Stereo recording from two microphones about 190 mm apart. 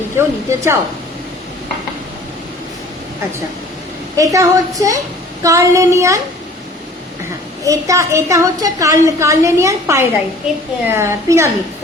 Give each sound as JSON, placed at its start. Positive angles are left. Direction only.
{"t": 0.2, "sound": "a woman's voice", "side_deg": -15}
{"t": 4.2, "sound": "a woman's voice", "side_deg": -15}
{"t": 7.6, "sound": "a woman's voice", "side_deg": -15}